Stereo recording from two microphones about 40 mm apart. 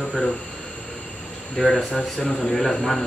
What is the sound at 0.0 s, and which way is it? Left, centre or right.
Speech, left.